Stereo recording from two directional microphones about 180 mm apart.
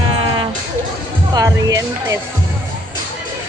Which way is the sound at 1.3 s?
20° right (ahead or behind).